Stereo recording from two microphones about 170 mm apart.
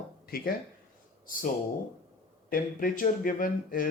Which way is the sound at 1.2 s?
55° left (ahead or behind).